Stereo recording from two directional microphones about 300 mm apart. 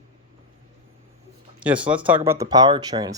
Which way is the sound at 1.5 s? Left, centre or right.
Centre.